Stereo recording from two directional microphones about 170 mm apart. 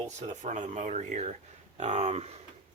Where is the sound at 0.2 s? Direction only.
45° right (ahead or behind).